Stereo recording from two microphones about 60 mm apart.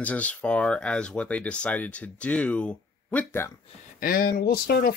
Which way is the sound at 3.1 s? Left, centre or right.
Left.